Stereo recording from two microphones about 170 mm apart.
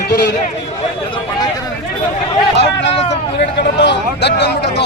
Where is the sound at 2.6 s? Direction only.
90° left.